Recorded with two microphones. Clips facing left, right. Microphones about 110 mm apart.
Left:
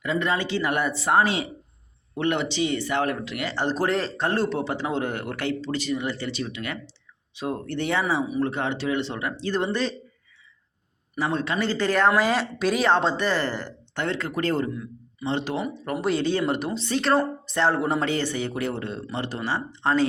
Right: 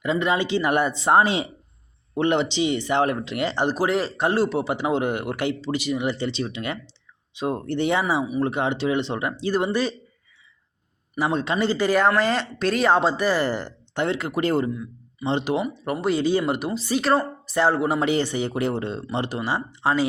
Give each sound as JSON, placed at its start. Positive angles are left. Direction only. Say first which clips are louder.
{"t": 0.0, "sound": "speech", "louder": "right 3 dB", "side_deg": -20}
{"t": 3.8, "sound": "a man's voice", "louder": "right 2 dB", "side_deg": -10}
{"t": 11.2, "sound": "a man's voice", "louder": "right 3 dB", "side_deg": -20}
{"t": 12.1, "sound": "speech", "louder": "even", "side_deg": 5}
{"t": 12.9, "sound": "a man's voice", "louder": "right 2 dB", "side_deg": -5}
{"t": 16.0, "sound": "speech", "louder": "right 2 dB", "side_deg": 0}
{"t": 18.1, "sound": "a man's voice", "louder": "right 3 dB", "side_deg": -15}